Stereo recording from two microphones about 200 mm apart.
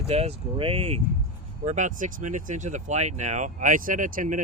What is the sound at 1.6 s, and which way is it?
Speech, 40° right (ahead or behind).